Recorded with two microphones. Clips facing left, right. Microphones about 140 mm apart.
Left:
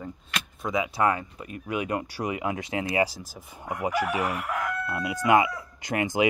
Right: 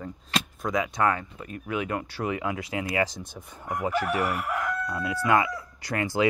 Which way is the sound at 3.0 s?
5° left (ahead or behind).